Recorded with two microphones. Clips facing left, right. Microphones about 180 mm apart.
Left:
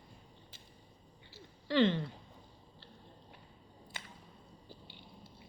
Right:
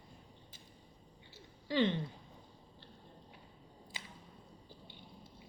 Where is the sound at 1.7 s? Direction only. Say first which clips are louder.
Left 3 dB; 15° right (ahead or behind).